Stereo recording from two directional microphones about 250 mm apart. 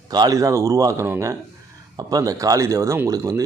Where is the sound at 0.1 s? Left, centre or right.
Centre.